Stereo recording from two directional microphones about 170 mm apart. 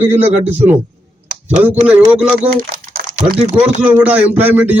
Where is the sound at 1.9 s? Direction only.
5° right (ahead or behind).